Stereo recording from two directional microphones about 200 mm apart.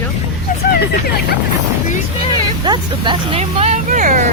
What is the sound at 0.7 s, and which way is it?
Speech, 50° left (ahead or behind).